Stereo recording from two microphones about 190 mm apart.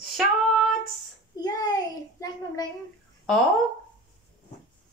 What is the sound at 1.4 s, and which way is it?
A woman's voice, 20° left (ahead or behind).